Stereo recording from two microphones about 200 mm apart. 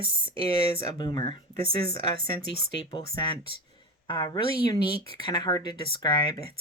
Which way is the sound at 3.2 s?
25° left (ahead or behind).